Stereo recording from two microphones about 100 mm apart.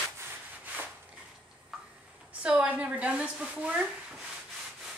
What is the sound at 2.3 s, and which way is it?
A woman's voice, 15° right (ahead or behind).